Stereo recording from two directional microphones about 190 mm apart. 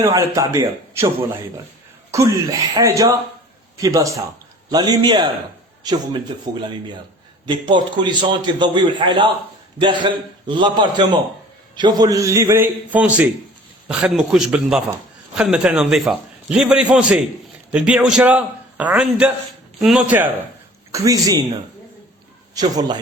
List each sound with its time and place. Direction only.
0.0 s a man's voice: 15° right (ahead or behind)
22.5 s a man's voice: 20° right (ahead or behind)